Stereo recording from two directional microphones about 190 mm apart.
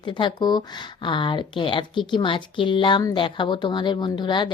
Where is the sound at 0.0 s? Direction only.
25° left (ahead or behind).